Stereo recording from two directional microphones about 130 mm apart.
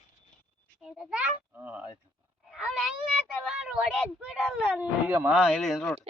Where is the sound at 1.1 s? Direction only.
10° right (ahead or behind).